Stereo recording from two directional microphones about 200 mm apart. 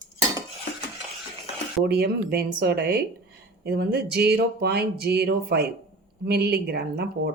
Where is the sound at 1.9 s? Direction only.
50° right (ahead or behind).